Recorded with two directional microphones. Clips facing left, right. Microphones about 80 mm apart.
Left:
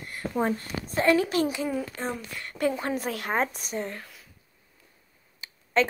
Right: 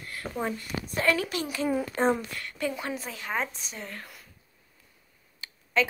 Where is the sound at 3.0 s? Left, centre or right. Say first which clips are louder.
Left 5 dB; left.